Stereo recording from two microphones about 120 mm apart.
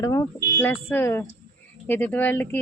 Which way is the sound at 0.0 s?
25° left (ahead or behind).